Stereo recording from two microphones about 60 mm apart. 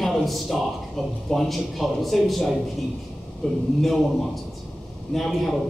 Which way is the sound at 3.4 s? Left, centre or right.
Centre.